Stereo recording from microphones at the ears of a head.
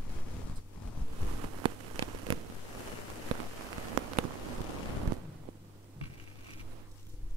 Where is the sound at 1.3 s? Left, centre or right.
Right.